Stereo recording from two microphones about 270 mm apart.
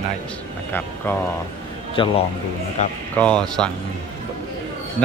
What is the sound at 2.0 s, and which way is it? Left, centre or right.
Speech, centre.